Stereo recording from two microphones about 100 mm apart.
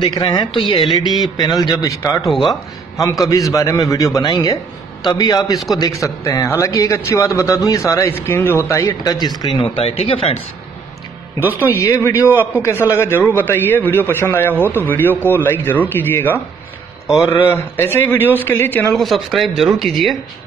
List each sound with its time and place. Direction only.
0.0 s speech: 50° left (ahead or behind)
1.2 s a man's voice: 45° left (ahead or behind)
2.2 s speech: centre (ahead or behind)
3.2 s a man's voice: 35° left (ahead or behind)
9.6 s speech: 75° left (ahead or behind)
11.7 s a man's voice: 25° left (ahead or behind)
18.9 s speech: centre (ahead or behind)